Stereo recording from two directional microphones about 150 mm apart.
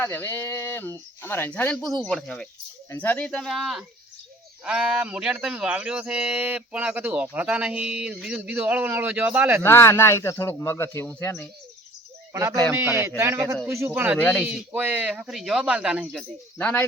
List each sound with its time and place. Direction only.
0.0 s speech: 15° left (ahead or behind); by 9.6 s 10° right (ahead or behind)
9.6 s speech: 15° left (ahead or behind)
12.3 s a man's voice: 20° right (ahead or behind)
14.2 s speech: 10° left (ahead or behind)
14.4 s speech: 10° right (ahead or behind)
16.6 s speech: 10° left (ahead or behind)